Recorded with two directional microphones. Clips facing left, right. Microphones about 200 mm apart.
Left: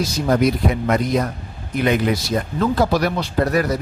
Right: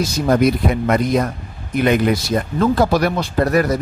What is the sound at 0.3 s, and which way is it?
Speech, 55° right (ahead or behind).